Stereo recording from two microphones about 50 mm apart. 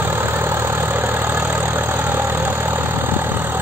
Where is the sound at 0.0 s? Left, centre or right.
Right.